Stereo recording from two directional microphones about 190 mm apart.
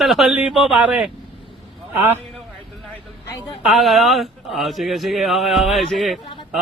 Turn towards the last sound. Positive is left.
turn(degrees=0)  # may be behind; listen again after turning